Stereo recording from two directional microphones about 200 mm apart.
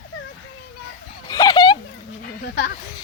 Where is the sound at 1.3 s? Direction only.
20° left (ahead or behind).